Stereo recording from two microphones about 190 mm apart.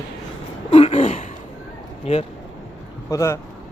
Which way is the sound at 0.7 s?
30° left (ahead or behind).